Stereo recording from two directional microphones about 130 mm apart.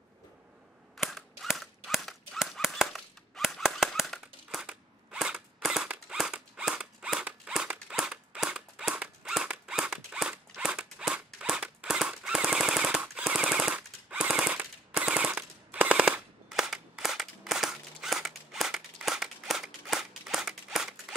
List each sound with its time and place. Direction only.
0.9 s cap gun: centre (ahead or behind)